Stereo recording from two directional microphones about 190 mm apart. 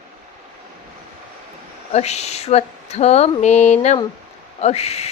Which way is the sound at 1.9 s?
35° left (ahead or behind).